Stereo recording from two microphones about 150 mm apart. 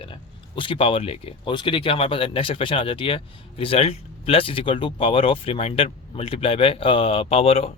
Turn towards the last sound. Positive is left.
turn(degrees=45)  # may be behind; listen again after turning